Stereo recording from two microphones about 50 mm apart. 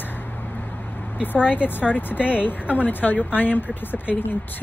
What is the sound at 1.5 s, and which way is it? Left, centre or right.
Speech, left.